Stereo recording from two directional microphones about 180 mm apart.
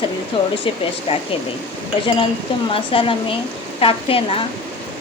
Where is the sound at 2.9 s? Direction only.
30° left (ahead or behind).